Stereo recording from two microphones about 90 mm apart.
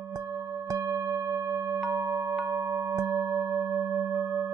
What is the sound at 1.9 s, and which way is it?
Music, 40° right (ahead or behind).